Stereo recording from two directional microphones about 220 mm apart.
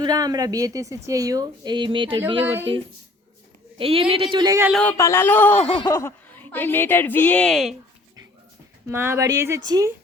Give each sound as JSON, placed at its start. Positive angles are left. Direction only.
{"t": 0.0, "sound": "a woman's voice", "side_deg": -15}
{"t": 3.8, "sound": "speech", "side_deg": -25}
{"t": 4.7, "sound": "a woman's voice", "side_deg": 5}
{"t": 5.6, "sound": "a sound", "side_deg": 25}
{"t": 5.9, "sound": "a woman's voice", "side_deg": 10}
{"t": 8.9, "sound": "a woman's voice", "side_deg": -10}